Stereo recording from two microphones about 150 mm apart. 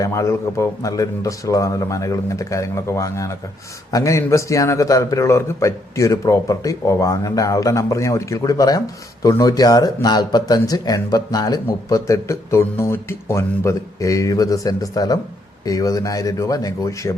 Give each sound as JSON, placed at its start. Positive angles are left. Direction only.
{"t": 0.0, "sound": "speech", "side_deg": 20}